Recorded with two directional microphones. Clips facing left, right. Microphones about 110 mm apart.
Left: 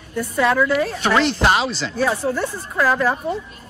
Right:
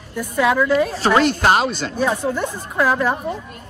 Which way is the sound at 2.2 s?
15° right (ahead or behind).